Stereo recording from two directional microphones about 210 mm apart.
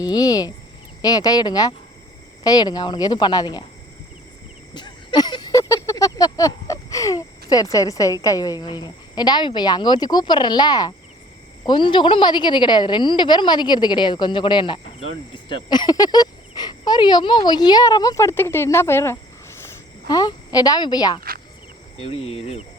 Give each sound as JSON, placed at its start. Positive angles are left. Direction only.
{"t": 0.0, "sound": "cricket", "side_deg": 20}
{"t": 1.0, "sound": "a woman's voice", "side_deg": 20}
{"t": 4.7, "sound": "a sound", "side_deg": 20}
{"t": 11.6, "sound": "a woman's voice", "side_deg": 20}